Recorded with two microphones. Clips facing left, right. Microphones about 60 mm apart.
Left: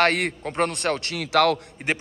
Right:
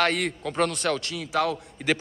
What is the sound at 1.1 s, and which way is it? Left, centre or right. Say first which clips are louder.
Speech: left 6 dB; left.